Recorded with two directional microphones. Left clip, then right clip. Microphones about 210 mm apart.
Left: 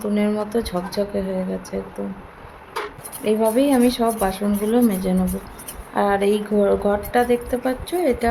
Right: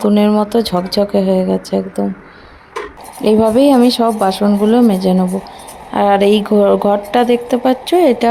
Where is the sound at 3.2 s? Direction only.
40° right (ahead or behind).